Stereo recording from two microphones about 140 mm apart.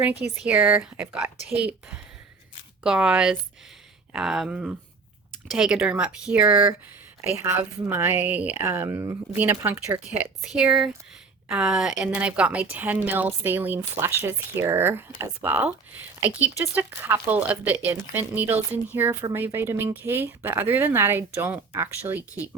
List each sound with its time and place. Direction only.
0.0 s a woman's voice: 10° right (ahead or behind)